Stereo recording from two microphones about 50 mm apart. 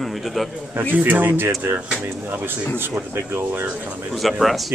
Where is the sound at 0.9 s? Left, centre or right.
Right.